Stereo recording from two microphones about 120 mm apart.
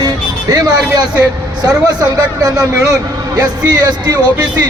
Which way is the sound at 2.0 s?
30° right (ahead or behind).